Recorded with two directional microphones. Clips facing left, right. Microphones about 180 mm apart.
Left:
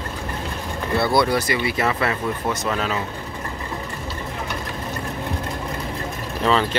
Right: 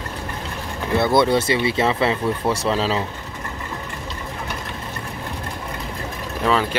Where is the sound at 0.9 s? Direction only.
20° right (ahead or behind).